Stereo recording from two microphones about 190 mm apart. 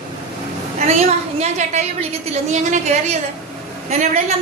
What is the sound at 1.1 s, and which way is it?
A woman's voice, 35° right (ahead or behind).